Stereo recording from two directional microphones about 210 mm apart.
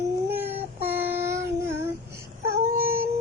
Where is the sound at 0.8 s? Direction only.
10° right (ahead or behind).